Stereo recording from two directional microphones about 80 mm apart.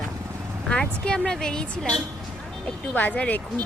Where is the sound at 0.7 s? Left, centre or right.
Centre.